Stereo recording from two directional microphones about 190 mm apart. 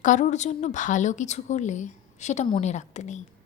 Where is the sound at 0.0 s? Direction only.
40° left (ahead or behind).